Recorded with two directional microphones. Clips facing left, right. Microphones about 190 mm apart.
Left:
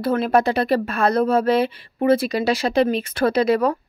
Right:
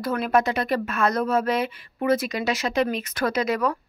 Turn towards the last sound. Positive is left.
turn(degrees=30)  # may be behind; listen again after turning